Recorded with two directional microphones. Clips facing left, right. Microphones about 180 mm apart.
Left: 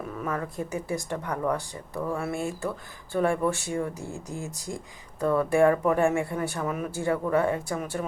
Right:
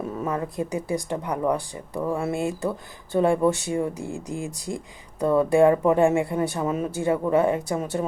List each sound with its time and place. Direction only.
0.2 s speech: 20° right (ahead or behind)